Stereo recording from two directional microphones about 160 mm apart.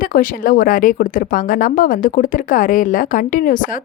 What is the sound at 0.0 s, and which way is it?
Speech, 60° left (ahead or behind).